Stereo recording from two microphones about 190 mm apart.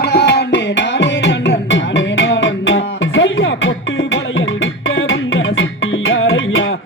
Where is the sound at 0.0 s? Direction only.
60° left (ahead or behind); by 3.7 s 80° left.